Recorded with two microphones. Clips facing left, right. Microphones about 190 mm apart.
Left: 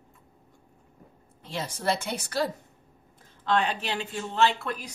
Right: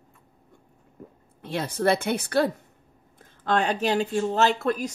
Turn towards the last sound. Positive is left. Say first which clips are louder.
# right 3 dB
turn(degrees=-45)  # may be behind; listen again after turning